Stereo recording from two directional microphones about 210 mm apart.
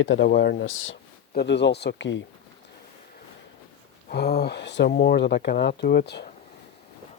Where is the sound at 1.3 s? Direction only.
55° left (ahead or behind).